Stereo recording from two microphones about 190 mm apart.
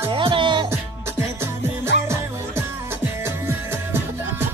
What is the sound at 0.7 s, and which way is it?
Music, 15° right (ahead or behind).